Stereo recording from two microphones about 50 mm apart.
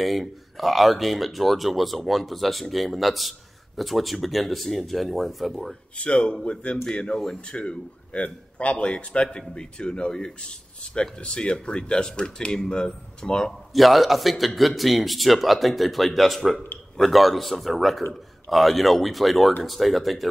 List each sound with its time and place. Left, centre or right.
0.0 s speech: centre
5.9 s a man's voice: left
13.5 s speech: centre